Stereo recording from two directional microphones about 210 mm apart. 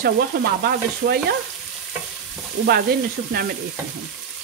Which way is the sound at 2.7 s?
45° right (ahead or behind).